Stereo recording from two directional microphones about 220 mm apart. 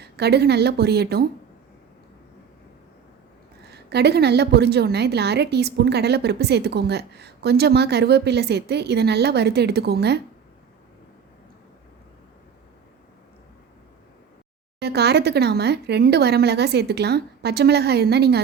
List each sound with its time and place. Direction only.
0.0 s a woman's voice: 50° right (ahead or behind)
3.7 s a woman's voice: 50° right (ahead or behind)
14.8 s a woman's voice: 50° right (ahead or behind)